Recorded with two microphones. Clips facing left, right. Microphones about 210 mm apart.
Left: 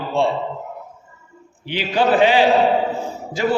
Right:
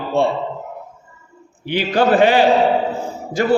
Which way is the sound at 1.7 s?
50° right (ahead or behind).